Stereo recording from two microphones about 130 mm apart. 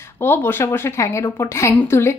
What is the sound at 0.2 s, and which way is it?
A woman's voice, 15° left (ahead or behind).